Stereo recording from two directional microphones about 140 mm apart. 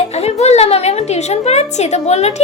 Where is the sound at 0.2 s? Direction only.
50° left (ahead or behind).